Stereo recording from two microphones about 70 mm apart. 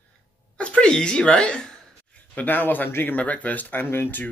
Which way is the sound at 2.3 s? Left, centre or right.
Left.